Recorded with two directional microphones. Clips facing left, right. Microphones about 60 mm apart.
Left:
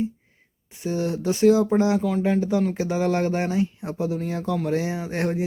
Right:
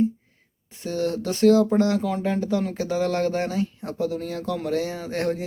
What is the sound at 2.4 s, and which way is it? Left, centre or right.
Speech, centre.